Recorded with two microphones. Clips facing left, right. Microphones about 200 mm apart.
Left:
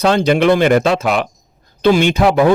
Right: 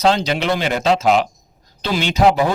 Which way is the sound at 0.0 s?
55° left (ahead or behind).